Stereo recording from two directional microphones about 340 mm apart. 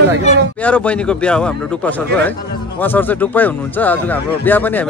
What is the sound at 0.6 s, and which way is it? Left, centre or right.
A man's voice, centre.